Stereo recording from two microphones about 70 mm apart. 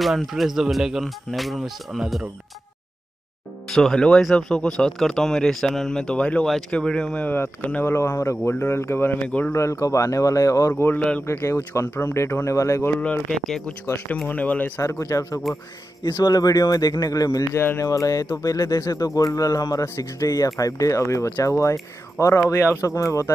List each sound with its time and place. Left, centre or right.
0.0 s speech: centre
3.7 s speech: centre
7.2 s speech: left
9.5 s speech: left
11.0 s speech: centre
11.2 s speech: left
13.3 s speech: centre
14.2 s speech: left
14.8 s speech: left
17.6 s speech: left
17.8 s speech: left
22.4 s speech: left
22.8 s speech: left